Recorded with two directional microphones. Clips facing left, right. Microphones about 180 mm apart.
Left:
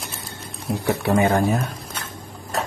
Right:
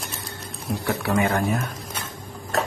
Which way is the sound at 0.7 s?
20° left (ahead or behind).